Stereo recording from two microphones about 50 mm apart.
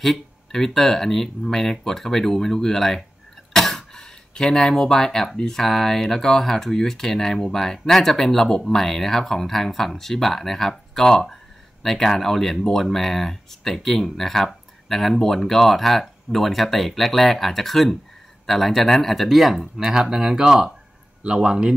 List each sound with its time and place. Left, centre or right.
0.0 s speech: centre